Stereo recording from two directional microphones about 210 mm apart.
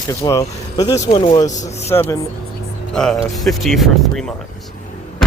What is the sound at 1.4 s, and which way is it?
Speech, 35° left (ahead or behind).